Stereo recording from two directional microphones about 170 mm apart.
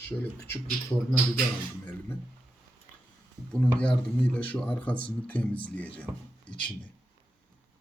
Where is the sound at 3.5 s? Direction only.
5° left (ahead or behind).